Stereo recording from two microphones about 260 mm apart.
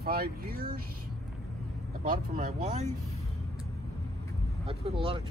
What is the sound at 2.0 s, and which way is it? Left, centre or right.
Speech, right.